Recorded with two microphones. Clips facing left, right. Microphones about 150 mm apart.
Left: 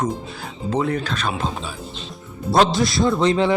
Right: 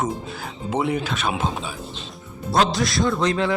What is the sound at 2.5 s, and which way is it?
A man's voice, 25° left (ahead or behind).